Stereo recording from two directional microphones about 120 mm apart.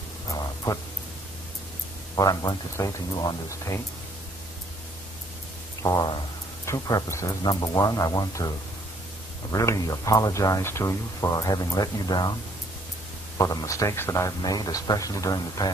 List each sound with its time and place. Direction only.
2.1 s speech: 30° left (ahead or behind)
5.8 s a sound: 30° left (ahead or behind)
6.6 s speech: 30° left (ahead or behind)
13.4 s speech: 30° left (ahead or behind)